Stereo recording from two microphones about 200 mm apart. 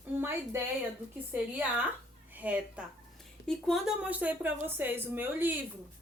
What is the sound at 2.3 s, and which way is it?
A woman's voice, 10° right (ahead or behind).